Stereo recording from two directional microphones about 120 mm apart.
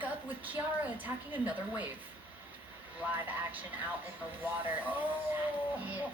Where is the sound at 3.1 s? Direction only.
15° right (ahead or behind).